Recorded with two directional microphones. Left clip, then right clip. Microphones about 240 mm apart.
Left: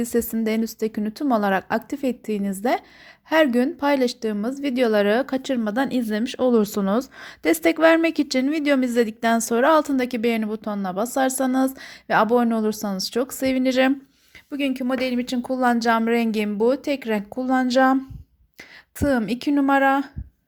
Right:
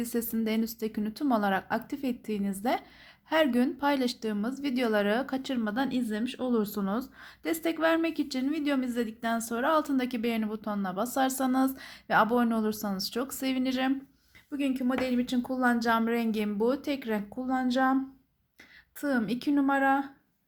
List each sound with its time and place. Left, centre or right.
0.0 s a woman's voice: left